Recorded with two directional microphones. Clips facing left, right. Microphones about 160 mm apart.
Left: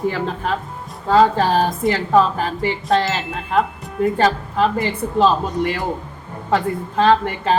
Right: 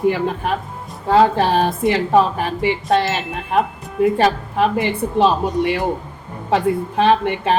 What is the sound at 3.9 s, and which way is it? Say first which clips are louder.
Speech: right 2 dB; 10° right (ahead or behind).